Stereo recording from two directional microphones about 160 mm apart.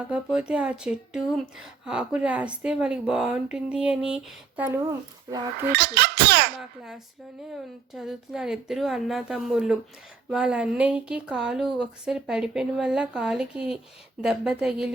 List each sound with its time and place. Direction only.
0.0 s speech: 5° right (ahead or behind)
5.7 s speech: 90° right
6.6 s speech: centre (ahead or behind)